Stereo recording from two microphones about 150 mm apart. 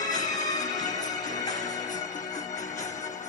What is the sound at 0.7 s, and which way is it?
Music, 55° left (ahead or behind).